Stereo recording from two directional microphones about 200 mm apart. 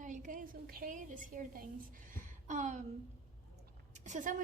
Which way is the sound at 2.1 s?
40° right (ahead or behind).